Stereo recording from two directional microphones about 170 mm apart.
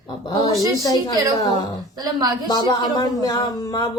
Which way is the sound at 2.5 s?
25° left (ahead or behind).